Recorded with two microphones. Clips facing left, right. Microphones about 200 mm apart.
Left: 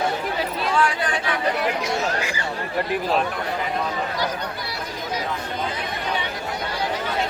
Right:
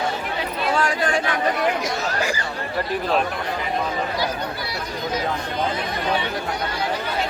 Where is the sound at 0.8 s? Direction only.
45° right (ahead or behind).